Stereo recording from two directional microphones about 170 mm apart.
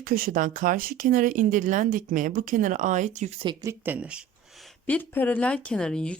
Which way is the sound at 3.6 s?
10° right (ahead or behind).